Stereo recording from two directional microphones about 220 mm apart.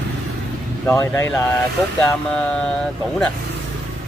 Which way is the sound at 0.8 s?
10° left (ahead or behind).